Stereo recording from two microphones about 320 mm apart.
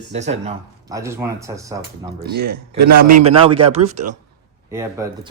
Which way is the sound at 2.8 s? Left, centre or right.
Right.